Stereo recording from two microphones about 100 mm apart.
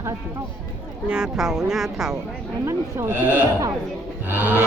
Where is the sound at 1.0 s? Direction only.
10° right (ahead or behind).